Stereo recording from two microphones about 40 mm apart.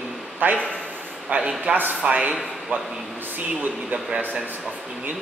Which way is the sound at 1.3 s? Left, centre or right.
Right.